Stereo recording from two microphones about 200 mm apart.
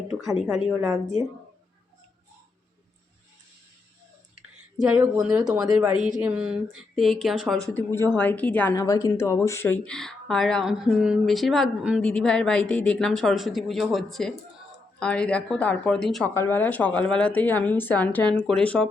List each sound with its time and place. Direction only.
0.1 s a woman's voice: centre (ahead or behind)
4.8 s a woman's voice: 5° right (ahead or behind)
5.4 s speech: 20° right (ahead or behind)
6.2 s a woman's voice: 5° right (ahead or behind)